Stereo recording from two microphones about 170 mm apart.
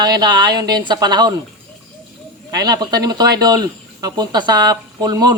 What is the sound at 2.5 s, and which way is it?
Speech, 25° right (ahead or behind).